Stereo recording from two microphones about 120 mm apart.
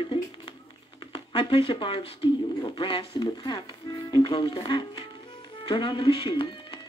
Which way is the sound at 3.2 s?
35° left (ahead or behind).